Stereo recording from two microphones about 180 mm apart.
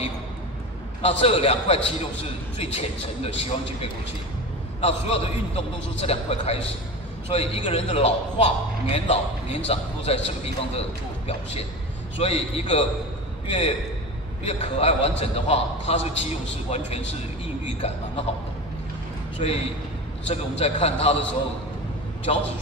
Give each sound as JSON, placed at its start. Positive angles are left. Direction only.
{"t": 1.0, "sound": "a man's voice", "side_deg": 30}
{"t": 17.6, "sound": "a man's voice", "side_deg": 35}
{"t": 20.2, "sound": "a man's voice", "side_deg": 35}
{"t": 22.3, "sound": "a man's voice", "side_deg": 35}